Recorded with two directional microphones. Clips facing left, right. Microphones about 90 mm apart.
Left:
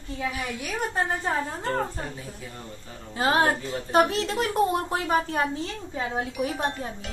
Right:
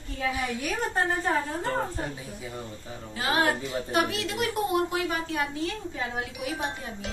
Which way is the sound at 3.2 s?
35° left (ahead or behind).